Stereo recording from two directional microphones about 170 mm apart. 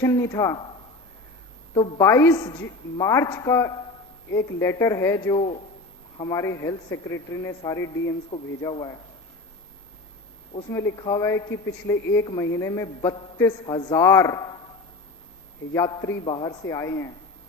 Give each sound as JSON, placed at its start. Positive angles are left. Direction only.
{"t": 0.0, "sound": "a woman's voice", "side_deg": 15}
{"t": 1.7, "sound": "a woman's voice", "side_deg": 20}
{"t": 5.4, "sound": "a man's voice", "side_deg": 35}
{"t": 6.1, "sound": "a woman's voice", "side_deg": 20}
{"t": 10.7, "sound": "speech", "side_deg": 15}
{"t": 13.0, "sound": "a woman's voice", "side_deg": 25}
{"t": 15.7, "sound": "a woman's voice", "side_deg": 20}